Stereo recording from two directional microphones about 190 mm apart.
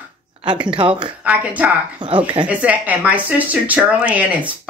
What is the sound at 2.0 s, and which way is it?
Speech, 25° right (ahead or behind).